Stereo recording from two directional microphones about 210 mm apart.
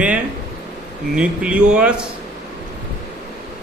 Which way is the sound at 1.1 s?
5° right (ahead or behind).